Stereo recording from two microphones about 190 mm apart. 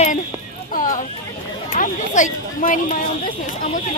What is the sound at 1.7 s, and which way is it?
Speech, 40° left (ahead or behind).